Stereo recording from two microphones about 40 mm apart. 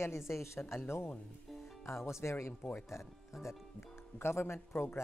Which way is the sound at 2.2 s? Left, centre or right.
Left.